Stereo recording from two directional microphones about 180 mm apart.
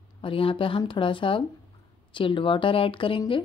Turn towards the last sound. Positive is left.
turn(degrees=30)  # may be behind; listen again after turning